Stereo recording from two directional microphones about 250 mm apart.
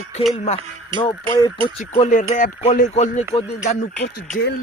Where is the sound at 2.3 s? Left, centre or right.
Left.